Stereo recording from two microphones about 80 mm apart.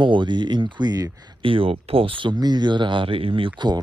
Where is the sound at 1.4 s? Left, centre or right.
Right.